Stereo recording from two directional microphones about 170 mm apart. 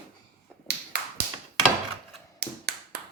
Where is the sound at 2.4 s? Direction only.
65° right (ahead or behind).